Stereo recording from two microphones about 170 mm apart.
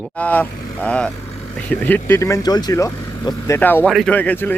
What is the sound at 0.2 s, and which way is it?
Speech, 10° left (ahead or behind).